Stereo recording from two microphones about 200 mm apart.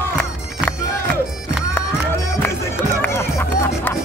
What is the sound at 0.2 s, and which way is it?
Music, 5° left (ahead or behind).